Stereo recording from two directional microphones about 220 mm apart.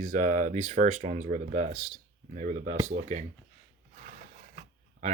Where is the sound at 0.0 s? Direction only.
35° right (ahead or behind).